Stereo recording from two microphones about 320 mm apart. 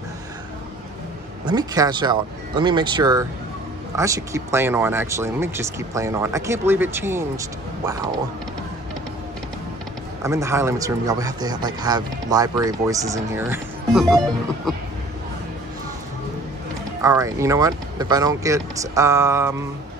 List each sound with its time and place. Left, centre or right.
1.4 s speech: centre
10.2 s speech: centre
17.0 s speech: centre